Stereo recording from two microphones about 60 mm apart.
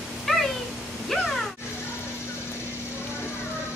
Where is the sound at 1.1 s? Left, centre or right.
Centre.